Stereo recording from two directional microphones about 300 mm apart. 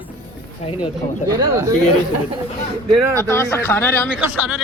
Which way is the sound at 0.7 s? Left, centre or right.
Centre.